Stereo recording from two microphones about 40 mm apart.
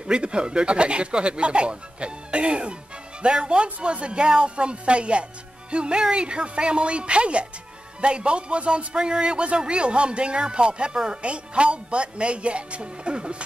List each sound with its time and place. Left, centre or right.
0.0 s speech: right